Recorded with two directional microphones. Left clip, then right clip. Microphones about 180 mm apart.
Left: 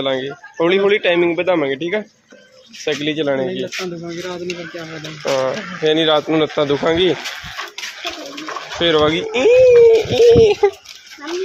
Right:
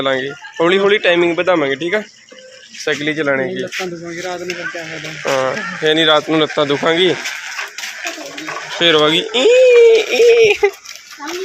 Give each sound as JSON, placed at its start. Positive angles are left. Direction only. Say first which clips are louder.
{"t": 0.0, "sound": "a man's voice", "louder": "right 3 dB", "side_deg": 0}
{"t": 5.2, "sound": "speech", "louder": "right 2 dB", "side_deg": 0}
{"t": 8.8, "sound": "speech", "louder": "right 3 dB", "side_deg": 10}